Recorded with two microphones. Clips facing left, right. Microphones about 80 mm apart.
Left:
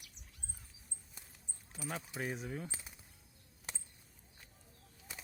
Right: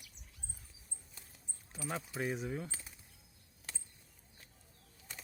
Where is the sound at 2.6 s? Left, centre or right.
Centre.